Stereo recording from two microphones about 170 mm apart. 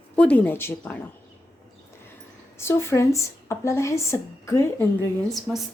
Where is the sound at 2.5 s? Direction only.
15° left (ahead or behind).